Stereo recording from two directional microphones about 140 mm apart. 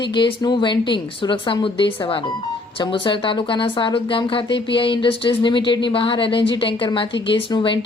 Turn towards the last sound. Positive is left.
turn(degrees=35)  # may be behind; listen again after turning